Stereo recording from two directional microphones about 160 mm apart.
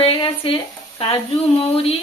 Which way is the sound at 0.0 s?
30° left (ahead or behind).